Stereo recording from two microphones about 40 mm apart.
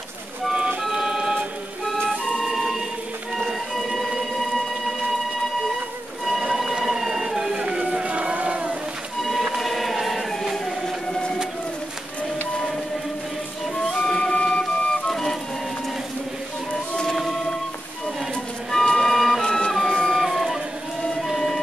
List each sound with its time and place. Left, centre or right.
0.9 s music: right
2.0 s music: centre
3.3 s a sound: centre
6.4 s a sound: centre
7.5 s music: right
8.1 s music: right
9.6 s choir: centre
13.9 s music: centre
14.3 s flute: left
15.0 s music: centre
16.9 s music: centre
18.7 s music: centre
19.4 s music: left
20.2 s a sound: centre